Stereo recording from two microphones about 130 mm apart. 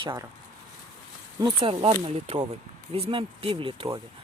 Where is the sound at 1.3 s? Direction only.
40° right (ahead or behind).